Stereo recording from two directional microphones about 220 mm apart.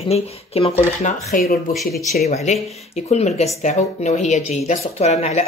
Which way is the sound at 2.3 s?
30° left (ahead or behind).